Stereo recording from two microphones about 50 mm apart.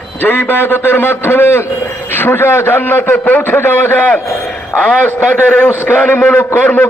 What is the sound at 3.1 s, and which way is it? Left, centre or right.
Speech, left.